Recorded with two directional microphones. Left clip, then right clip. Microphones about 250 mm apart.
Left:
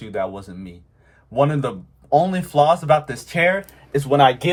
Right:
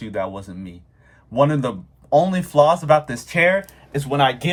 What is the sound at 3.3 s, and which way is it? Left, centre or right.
Speech, centre.